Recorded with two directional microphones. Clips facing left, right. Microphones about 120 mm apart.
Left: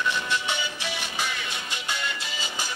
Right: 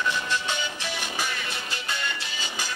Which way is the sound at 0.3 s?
15° left (ahead or behind).